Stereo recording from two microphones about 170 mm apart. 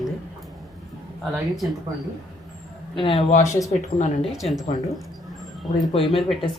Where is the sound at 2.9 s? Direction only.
30° left (ahead or behind).